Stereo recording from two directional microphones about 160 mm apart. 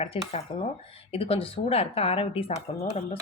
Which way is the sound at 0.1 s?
35° left (ahead or behind).